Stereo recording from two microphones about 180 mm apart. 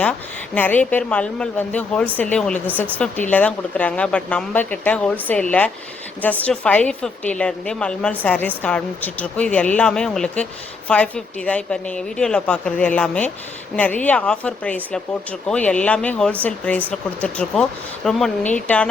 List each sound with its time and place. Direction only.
0.5 s a woman's voice: 10° left (ahead or behind)